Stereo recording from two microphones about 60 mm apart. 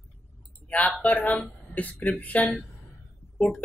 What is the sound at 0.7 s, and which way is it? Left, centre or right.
Speech, left.